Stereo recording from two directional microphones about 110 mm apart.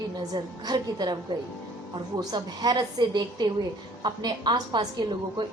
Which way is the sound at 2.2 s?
40° right (ahead or behind).